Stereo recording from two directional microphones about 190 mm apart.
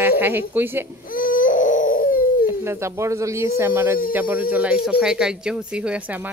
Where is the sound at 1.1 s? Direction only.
45° left (ahead or behind).